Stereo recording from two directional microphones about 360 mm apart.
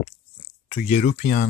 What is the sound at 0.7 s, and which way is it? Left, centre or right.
Speech, centre.